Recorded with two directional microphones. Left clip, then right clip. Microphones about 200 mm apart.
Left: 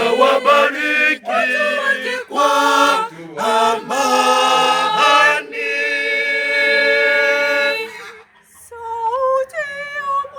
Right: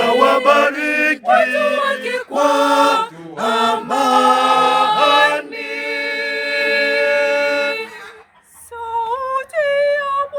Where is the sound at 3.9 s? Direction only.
45° right (ahead or behind).